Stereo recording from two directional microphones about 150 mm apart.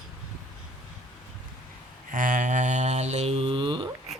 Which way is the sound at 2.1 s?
60° right (ahead or behind).